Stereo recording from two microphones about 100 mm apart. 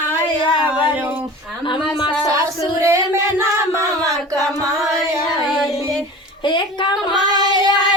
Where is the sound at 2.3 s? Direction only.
30° right (ahead or behind).